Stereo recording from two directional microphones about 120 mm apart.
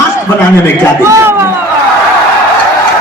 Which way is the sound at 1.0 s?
20° right (ahead or behind).